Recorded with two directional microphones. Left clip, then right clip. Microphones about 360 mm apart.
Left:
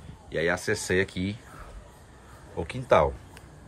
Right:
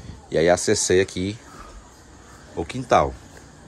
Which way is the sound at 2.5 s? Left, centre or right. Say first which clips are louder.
Right 3 dB; centre.